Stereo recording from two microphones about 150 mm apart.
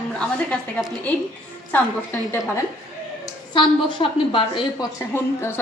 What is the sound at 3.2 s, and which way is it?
A woman's voice, 35° left (ahead or behind).